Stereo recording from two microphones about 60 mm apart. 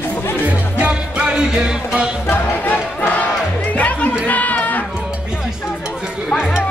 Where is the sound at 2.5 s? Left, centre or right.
Left.